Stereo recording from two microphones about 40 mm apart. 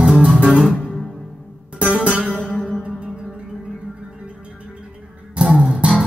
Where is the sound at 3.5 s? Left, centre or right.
Right.